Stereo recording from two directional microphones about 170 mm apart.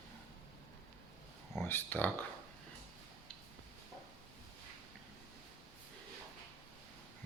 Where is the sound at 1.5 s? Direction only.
15° left (ahead or behind).